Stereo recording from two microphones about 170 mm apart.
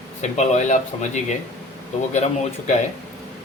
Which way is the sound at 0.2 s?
45° left (ahead or behind).